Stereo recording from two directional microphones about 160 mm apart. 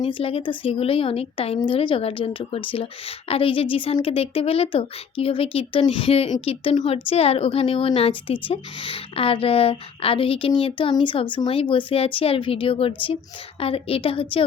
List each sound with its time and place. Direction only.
0.0 s a woman's voice: 35° left (ahead or behind)